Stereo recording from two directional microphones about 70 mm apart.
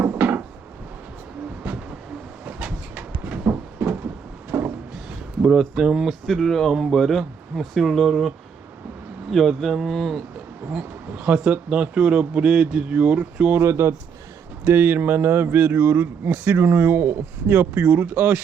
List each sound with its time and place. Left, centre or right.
0.0 s wood: right
2.6 s a sound: right
5.4 s speech: centre
6.2 s speech: centre
9.3 s speech: centre
10.7 s speech: centre
13.6 s speech: right